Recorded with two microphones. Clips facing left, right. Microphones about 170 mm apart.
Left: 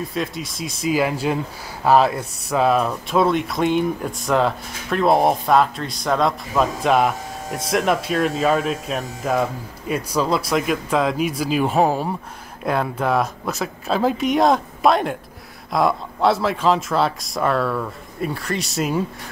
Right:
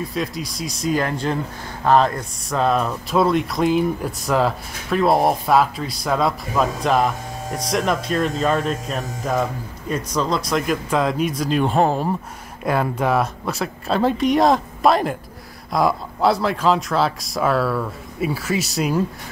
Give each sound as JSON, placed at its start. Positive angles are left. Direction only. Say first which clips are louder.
{"t": 0.1, "sound": "speech", "louder": "even", "side_deg": 0}